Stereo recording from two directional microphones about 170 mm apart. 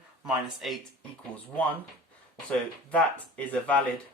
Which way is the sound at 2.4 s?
10° left (ahead or behind).